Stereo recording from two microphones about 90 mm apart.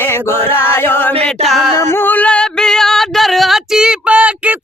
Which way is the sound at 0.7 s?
25° left (ahead or behind).